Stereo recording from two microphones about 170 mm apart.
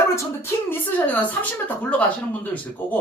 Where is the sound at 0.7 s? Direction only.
10° left (ahead or behind).